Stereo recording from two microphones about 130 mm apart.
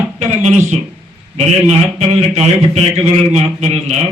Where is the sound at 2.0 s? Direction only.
50° right (ahead or behind).